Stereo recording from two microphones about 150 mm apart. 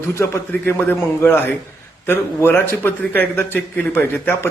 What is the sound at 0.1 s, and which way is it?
A man's voice, 20° left (ahead or behind).